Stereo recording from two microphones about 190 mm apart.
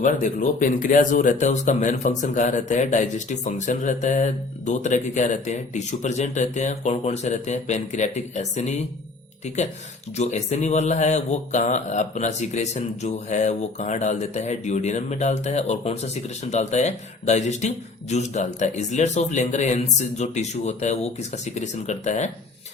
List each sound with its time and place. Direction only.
0.0 s speech: 45° left (ahead or behind)
10.2 s speech: 35° left (ahead or behind)